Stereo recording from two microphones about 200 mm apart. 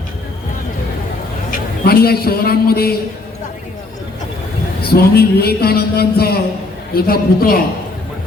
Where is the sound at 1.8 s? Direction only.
50° left (ahead or behind).